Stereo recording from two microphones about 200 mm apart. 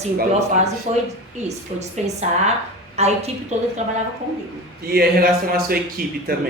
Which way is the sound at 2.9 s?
35° right (ahead or behind).